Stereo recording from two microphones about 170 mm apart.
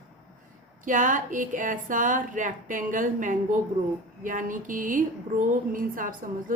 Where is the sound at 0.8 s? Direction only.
50° right (ahead or behind).